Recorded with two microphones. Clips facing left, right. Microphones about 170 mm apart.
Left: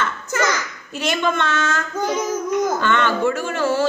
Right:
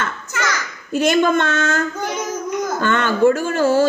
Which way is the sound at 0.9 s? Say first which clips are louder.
Right 6 dB; 45° right (ahead or behind).